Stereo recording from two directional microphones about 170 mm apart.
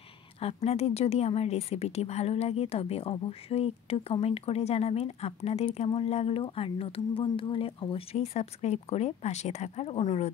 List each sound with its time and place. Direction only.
0.4 s a woman's voice: 35° left (ahead or behind)